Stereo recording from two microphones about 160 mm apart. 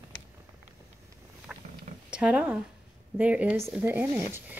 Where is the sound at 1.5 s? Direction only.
5° right (ahead or behind).